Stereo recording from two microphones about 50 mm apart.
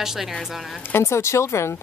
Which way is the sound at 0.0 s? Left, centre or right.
Centre.